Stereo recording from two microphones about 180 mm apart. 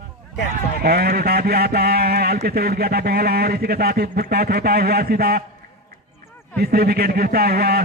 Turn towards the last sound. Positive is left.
turn(degrees=-60)  # may be behind; listen again after turning